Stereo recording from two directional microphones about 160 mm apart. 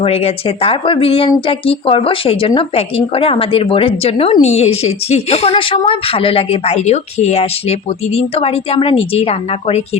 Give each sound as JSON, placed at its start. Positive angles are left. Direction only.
{"t": 0.0, "sound": "speech", "side_deg": 40}